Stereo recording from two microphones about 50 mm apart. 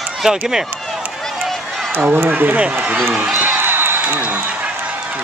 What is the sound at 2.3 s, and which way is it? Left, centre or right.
Speech, right.